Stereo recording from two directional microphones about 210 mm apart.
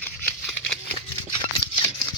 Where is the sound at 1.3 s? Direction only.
20° left (ahead or behind).